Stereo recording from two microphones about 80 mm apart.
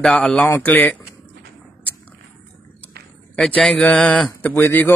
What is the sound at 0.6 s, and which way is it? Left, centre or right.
Speech, centre.